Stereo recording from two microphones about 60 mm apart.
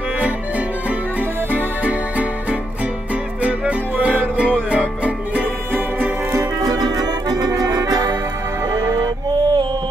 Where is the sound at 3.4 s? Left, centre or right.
Right.